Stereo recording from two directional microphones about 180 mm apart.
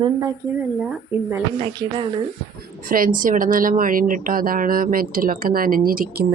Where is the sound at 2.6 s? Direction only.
50° right (ahead or behind).